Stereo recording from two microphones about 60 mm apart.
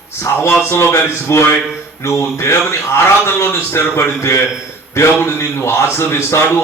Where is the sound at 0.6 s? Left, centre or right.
Left.